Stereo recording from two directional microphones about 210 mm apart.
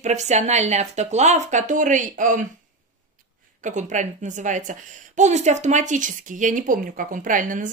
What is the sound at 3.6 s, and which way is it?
Speech, 35° right (ahead or behind).